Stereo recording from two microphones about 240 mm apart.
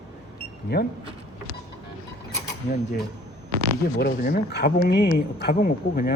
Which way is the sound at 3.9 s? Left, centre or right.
Left.